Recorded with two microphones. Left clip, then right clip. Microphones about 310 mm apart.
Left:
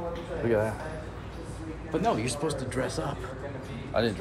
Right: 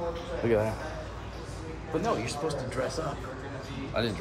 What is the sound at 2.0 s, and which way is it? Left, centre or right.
Speech, left.